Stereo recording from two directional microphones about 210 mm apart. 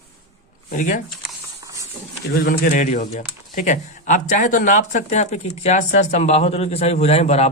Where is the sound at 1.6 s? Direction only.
15° right (ahead or behind).